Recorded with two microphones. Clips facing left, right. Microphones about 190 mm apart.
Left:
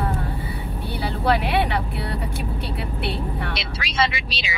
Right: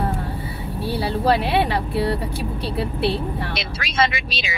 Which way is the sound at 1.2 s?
30° right (ahead or behind).